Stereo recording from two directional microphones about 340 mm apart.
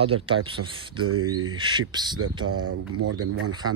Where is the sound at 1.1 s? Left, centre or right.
Right.